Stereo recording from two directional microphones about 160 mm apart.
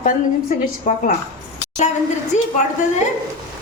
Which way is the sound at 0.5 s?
60° left (ahead or behind).